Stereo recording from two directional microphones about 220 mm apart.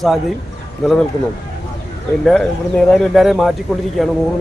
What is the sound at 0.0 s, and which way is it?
Speech, centre (ahead or behind).